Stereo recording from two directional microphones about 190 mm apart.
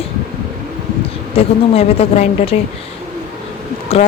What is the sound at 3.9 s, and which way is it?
Speech, 35° left (ahead or behind).